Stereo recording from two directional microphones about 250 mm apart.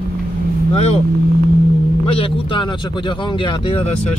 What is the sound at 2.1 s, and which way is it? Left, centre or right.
Speech, left.